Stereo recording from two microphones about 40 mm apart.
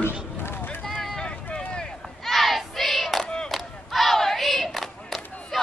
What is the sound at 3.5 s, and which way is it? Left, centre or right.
Battle cry, centre.